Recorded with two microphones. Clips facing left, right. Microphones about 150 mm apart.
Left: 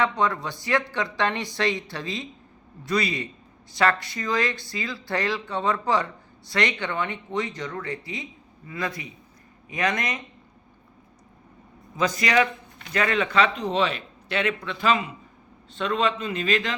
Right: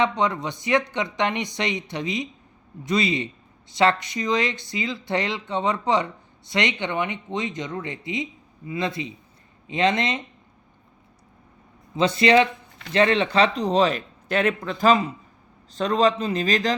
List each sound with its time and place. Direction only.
0.0 s speech: 20° right (ahead or behind)
11.9 s speech: 30° right (ahead or behind)